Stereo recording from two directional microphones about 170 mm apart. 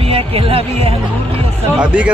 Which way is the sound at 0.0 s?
35° right (ahead or behind).